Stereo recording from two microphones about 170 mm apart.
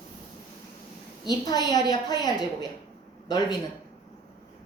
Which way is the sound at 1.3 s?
25° left (ahead or behind).